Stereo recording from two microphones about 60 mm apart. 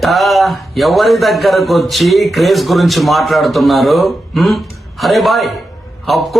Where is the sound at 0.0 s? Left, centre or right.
Centre.